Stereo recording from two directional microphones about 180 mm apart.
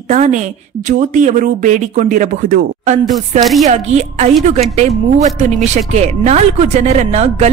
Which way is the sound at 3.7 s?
40° right (ahead or behind).